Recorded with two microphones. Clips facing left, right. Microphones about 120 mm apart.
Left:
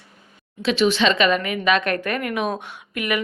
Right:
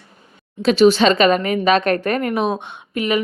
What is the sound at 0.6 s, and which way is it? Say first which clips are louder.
Speech: right 6 dB; 40° right (ahead or behind).